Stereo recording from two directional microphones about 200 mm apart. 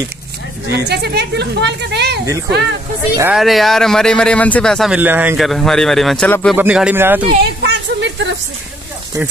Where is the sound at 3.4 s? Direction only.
Centre (ahead or behind).